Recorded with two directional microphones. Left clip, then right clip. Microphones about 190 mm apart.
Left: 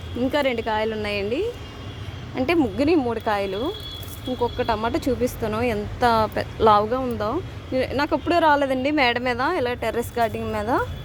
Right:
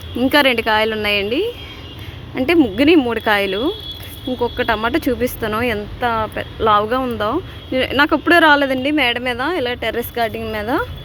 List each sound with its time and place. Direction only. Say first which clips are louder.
0.2 s a woman's voice: right 8 dB; 10° right (ahead or behind)
6.0 s speech: left 2 dB; 20° left (ahead or behind)
6.8 s speech: right 5 dB; 5° right (ahead or behind)